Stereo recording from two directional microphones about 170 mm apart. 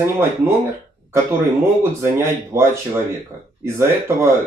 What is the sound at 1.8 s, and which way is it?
Speech, 15° right (ahead or behind).